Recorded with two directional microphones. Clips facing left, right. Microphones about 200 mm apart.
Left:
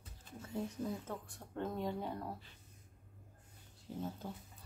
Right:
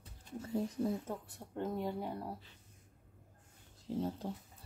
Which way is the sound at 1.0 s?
10° right (ahead or behind).